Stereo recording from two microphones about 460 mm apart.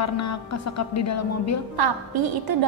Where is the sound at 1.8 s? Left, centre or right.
Right.